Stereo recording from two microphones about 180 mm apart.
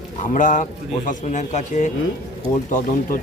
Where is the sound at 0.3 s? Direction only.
45° left (ahead or behind).